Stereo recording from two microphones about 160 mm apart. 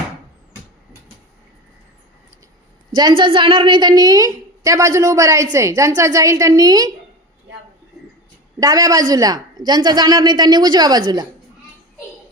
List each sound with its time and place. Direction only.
2.9 s a woman's voice: 25° right (ahead or behind)
8.6 s a woman's voice: 20° right (ahead or behind)